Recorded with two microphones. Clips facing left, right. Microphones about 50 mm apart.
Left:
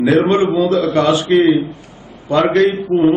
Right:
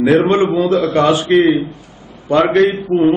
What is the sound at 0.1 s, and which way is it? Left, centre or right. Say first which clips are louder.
A man's voice: right 1 dB; centre.